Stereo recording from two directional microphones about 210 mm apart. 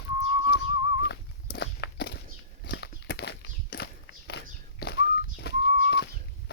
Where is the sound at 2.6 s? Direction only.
50° left (ahead or behind).